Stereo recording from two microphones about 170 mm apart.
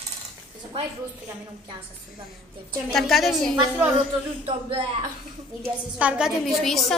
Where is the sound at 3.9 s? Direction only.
35° right (ahead or behind).